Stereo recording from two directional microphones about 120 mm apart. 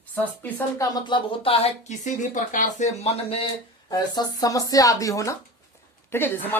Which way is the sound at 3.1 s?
55° left (ahead or behind).